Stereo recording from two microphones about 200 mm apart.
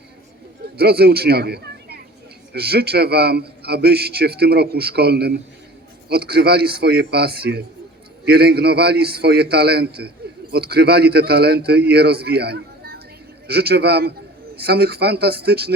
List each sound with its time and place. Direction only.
0.8 s a man's voice: 50° right (ahead or behind)